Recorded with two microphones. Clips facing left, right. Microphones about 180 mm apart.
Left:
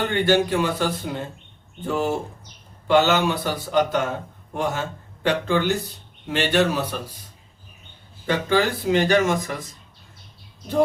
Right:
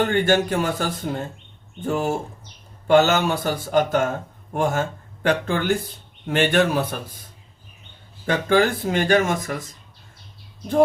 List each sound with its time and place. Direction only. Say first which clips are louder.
0.0 s speech: right 1 dB; 45° right (ahead or behind)
8.3 s speech: right 2 dB; 50° right (ahead or behind)